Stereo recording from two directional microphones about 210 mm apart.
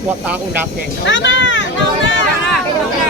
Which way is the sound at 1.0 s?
60° left (ahead or behind).